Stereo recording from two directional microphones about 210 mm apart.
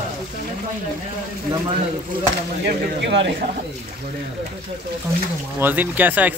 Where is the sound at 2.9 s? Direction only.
60° right (ahead or behind).